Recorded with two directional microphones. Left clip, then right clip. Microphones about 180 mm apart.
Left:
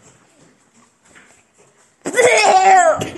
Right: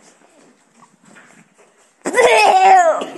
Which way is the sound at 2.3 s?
15° right (ahead or behind).